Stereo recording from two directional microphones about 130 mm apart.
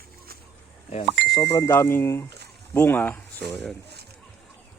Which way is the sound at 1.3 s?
25° left (ahead or behind).